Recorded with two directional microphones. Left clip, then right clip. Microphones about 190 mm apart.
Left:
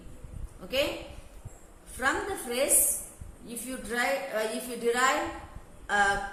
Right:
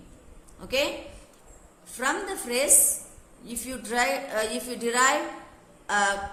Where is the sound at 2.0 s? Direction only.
60° right (ahead or behind).